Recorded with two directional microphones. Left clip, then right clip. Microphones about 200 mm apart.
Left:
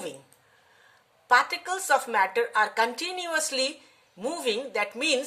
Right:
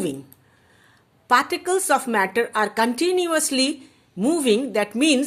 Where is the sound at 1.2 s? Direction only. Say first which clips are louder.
Right 3 dB; 35° right (ahead or behind).